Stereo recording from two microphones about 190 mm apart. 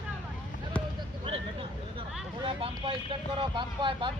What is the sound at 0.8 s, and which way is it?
Basketball bounce, 5° left (ahead or behind).